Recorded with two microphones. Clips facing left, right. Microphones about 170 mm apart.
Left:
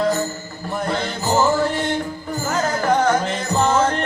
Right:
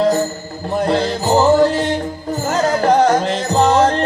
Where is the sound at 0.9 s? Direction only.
35° right (ahead or behind).